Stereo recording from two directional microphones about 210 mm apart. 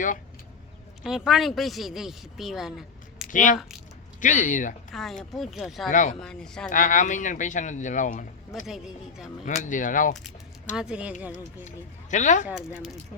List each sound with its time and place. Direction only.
1.0 s speech: centre (ahead or behind)
3.2 s speech: 40° left (ahead or behind)
4.9 s speech: centre (ahead or behind)
5.9 s speech: 35° left (ahead or behind)
6.1 s speech: 5° left (ahead or behind)
6.7 s speech: 35° left (ahead or behind)
8.6 s speech: centre (ahead or behind)
9.6 s speech: 40° left (ahead or behind)
10.8 s speech: 5° right (ahead or behind)
12.1 s speech: 35° left (ahead or behind)
12.5 s speech: centre (ahead or behind)